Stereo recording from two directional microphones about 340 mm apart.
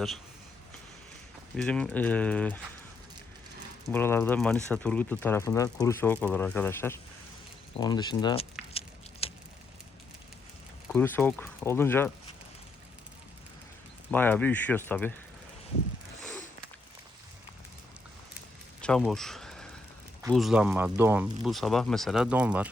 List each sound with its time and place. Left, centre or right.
1.5 s speech: centre
3.9 s speech: centre
9.2 s a sound: centre
10.8 s speech: centre
14.1 s speech: centre
18.8 s a sound: centre
20.2 s speech: centre